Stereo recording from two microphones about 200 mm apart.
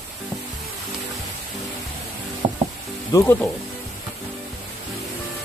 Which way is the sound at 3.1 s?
15° left (ahead or behind).